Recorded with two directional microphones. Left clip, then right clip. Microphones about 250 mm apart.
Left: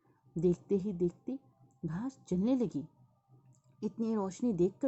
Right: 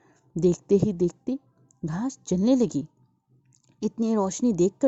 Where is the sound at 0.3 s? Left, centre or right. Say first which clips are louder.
Right 10 dB; right.